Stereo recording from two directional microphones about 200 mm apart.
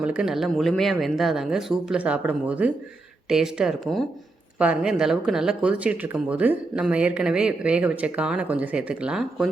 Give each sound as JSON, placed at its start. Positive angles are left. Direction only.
{"t": 0.0, "sound": "speech", "side_deg": -5}